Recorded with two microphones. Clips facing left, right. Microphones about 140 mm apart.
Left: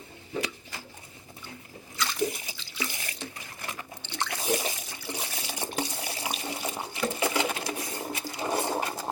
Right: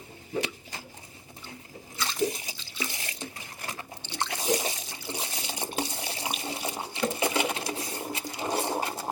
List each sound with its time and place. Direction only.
2.0 s drip: 25° right (ahead or behind)
4.1 s water: 20° right (ahead or behind)
8.3 s a sound: 25° right (ahead or behind)